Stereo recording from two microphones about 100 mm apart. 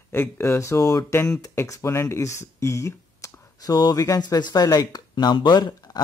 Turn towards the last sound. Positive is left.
turn(degrees=45)  # may be behind; listen again after turning